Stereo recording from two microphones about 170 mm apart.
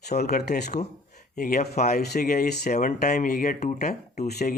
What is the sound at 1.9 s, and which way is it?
Speech, 65° left (ahead or behind).